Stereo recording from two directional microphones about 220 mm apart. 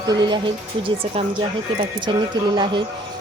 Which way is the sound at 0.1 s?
20° right (ahead or behind).